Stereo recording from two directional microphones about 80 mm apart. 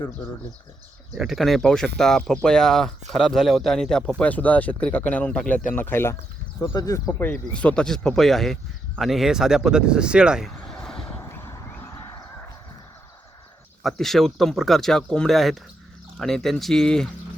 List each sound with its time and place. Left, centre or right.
1.1 s speech: centre
4.2 s speech: centre
5.6 s speech: left
6.6 s speech: left
7.2 s speech: left; by 10.5 s centre
10.7 s vehicle: centre
13.8 s speech: centre